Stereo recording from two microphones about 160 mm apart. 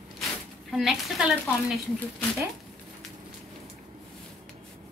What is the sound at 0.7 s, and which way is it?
A woman's voice, centre (ahead or behind).